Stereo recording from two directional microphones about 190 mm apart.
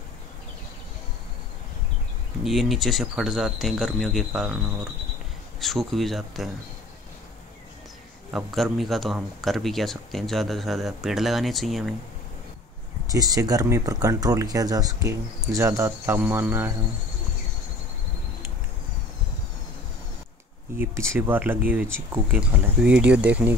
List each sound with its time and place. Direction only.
2.4 s speech: centre (ahead or behind)
5.6 s speech: centre (ahead or behind)
8.3 s speech: centre (ahead or behind)
13.1 s speech: 20° right (ahead or behind)
20.7 s speech: 10° right (ahead or behind)